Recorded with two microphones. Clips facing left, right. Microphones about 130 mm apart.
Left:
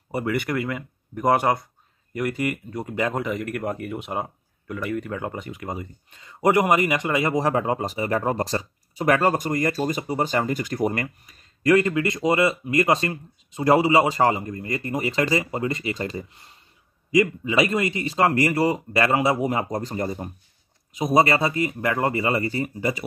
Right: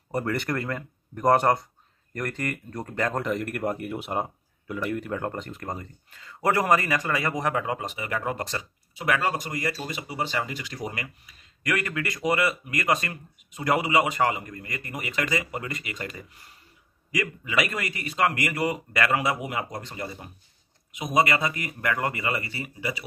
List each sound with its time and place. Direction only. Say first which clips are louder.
0.1 s speech: left 3 dB; 5° left (ahead or behind)
6.0 s a man's voice: left 5 dB; 20° left (ahead or behind); by 11.4 s 45° left (ahead or behind)
11.6 s a man's voice: left 10 dB; 25° left (ahead or behind); by 23.0 s 45° left (ahead or behind)